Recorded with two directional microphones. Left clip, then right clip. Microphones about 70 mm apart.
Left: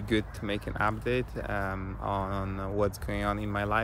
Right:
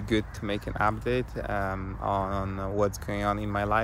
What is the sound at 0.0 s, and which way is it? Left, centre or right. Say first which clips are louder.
Speech: right 1 dB; left.